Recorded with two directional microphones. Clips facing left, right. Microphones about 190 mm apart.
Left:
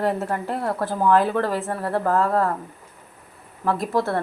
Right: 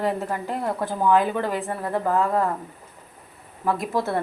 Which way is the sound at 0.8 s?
Centre (ahead or behind).